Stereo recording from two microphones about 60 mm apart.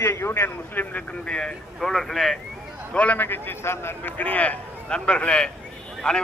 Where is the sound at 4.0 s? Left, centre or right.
Left.